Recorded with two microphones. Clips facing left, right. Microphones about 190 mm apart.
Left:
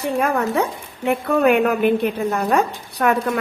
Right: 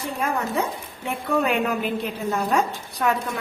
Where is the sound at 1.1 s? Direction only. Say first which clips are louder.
Left 7 dB; 60° left (ahead or behind).